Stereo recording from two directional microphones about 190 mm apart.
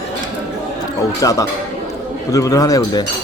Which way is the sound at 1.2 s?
15° left (ahead or behind).